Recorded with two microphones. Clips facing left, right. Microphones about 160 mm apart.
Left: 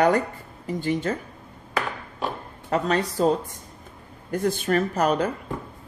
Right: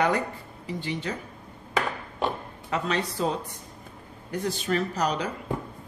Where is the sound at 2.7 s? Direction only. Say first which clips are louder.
Left 5 dB; 40° left (ahead or behind).